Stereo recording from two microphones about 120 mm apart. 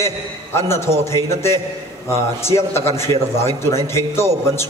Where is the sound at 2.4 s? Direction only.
20° left (ahead or behind).